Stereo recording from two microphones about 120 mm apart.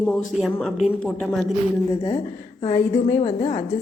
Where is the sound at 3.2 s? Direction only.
50° left (ahead or behind).